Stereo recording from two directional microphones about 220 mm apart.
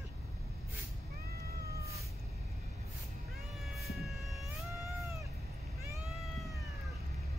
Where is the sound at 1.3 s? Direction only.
45° right (ahead or behind).